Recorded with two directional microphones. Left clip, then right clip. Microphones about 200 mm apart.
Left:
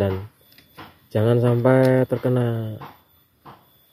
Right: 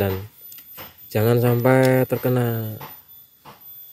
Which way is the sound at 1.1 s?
20° right (ahead or behind).